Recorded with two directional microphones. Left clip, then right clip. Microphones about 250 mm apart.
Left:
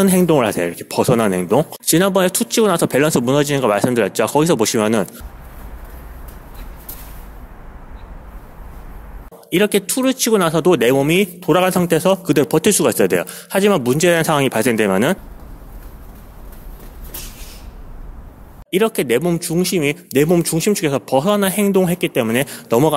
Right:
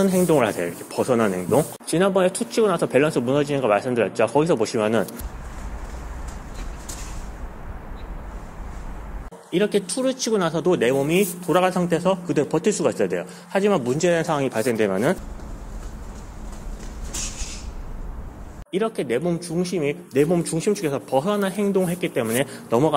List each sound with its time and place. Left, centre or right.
0.0 s speech: left
9.5 s speech: left
18.7 s speech: left